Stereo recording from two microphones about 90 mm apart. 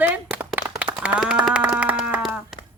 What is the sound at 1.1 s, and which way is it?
Speech, 10° right (ahead or behind).